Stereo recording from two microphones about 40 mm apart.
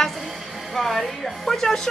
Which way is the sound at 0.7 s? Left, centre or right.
Centre.